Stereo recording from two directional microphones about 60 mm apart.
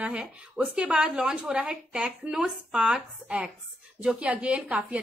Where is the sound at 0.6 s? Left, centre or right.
Right.